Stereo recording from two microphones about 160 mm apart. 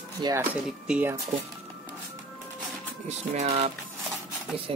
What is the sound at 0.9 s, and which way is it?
Speech, 10° right (ahead or behind).